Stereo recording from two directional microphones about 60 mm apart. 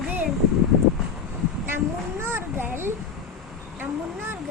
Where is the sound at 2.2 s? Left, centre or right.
Right.